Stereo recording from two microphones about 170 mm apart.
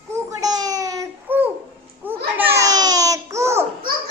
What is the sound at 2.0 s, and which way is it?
Babbling, 15° right (ahead or behind).